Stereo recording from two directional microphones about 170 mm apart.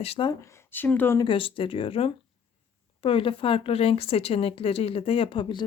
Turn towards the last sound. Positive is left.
turn(degrees=30)  # may be behind; listen again after turning